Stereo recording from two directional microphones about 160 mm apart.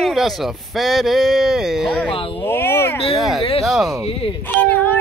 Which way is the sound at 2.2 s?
35° left (ahead or behind).